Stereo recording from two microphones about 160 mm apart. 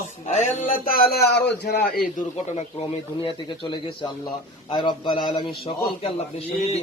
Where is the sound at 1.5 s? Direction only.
85° left; by 2.0 s 70° left (ahead or behind).